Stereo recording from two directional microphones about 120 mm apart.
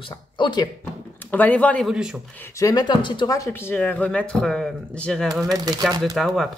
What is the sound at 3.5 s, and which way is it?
Speech, 15° left (ahead or behind).